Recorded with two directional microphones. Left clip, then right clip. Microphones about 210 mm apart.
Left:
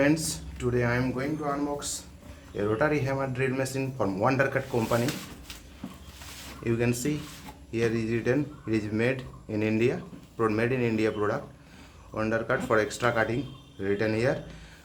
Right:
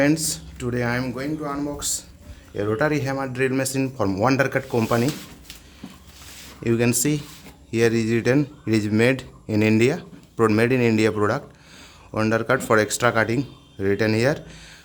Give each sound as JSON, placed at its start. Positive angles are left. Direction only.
{"t": 0.0, "sound": "speech", "side_deg": -40}
{"t": 6.6, "sound": "speech", "side_deg": -50}